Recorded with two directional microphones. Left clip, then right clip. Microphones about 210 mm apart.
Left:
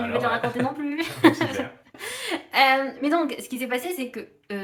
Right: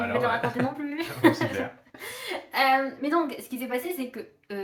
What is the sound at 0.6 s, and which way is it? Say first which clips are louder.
Speech: left 2 dB; 15° right (ahead or behind).